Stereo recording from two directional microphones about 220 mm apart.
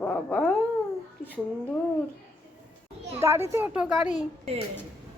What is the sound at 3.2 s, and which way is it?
Speech, 10° right (ahead or behind).